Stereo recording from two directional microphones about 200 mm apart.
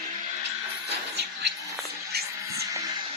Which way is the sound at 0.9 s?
55° right (ahead or behind).